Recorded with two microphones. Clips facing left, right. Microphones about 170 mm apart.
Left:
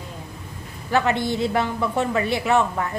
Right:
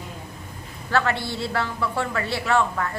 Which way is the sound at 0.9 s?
15° left (ahead or behind).